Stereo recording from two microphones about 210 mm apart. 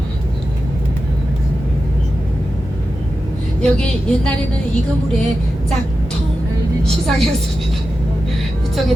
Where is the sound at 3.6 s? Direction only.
5° left (ahead or behind).